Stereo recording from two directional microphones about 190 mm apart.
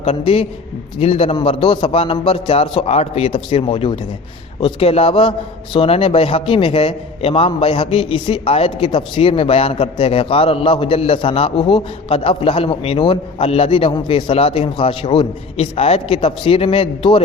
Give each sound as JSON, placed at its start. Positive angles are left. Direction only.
{"t": 0.0, "sound": "a man's voice", "side_deg": 35}